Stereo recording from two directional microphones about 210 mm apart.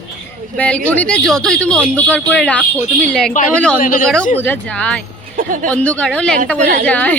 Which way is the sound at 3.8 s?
40° left (ahead or behind).